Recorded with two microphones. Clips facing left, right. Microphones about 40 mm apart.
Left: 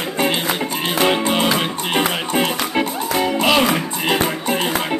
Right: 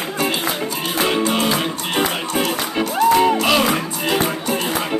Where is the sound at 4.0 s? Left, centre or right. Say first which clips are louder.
Left 1 dB; left.